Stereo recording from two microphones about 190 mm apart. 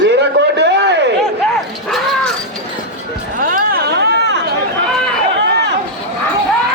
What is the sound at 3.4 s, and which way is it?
Chatter, 50° right (ahead or behind).